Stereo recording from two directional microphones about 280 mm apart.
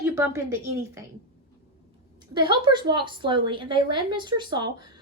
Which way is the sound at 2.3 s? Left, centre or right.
Centre.